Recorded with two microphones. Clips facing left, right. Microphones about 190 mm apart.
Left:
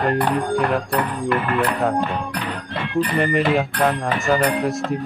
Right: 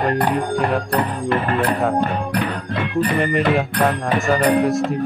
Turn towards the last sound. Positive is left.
turn(degrees=0)  # may be behind; listen again after turning